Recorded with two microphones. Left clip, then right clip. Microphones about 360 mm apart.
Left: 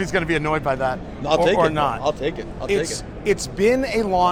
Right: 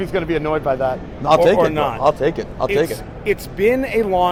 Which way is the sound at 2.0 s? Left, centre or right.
Right.